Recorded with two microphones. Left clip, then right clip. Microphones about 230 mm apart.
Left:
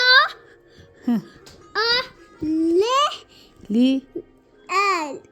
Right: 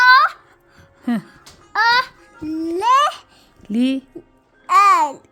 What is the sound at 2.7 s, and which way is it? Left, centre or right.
Speech, right.